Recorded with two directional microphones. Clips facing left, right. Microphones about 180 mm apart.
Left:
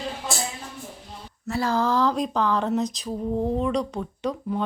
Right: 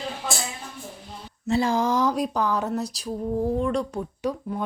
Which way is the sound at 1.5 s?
20° right (ahead or behind).